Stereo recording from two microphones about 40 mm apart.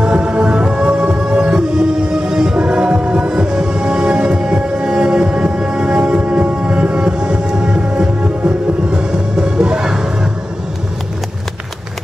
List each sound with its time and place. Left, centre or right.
0.0 s music: right